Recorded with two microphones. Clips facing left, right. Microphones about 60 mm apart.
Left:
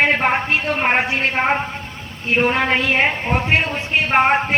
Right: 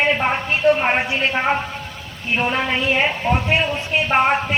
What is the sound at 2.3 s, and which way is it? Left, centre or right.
Speech, left.